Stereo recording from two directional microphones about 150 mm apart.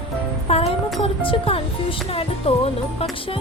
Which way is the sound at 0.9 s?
35° left (ahead or behind).